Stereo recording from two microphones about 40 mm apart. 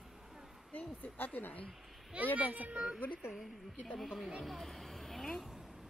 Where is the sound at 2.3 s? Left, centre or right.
Right.